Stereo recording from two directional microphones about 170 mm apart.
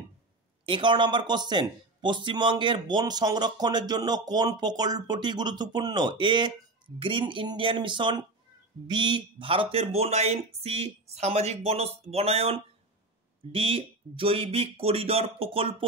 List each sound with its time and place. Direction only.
0.7 s speech: 30° right (ahead or behind)